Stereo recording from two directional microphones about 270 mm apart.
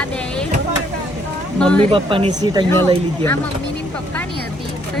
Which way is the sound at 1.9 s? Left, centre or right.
Centre.